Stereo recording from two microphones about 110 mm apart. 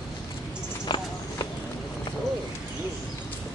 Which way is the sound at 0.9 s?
45° left (ahead or behind).